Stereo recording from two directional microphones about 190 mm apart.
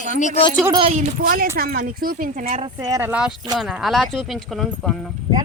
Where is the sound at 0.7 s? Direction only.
35° right (ahead or behind).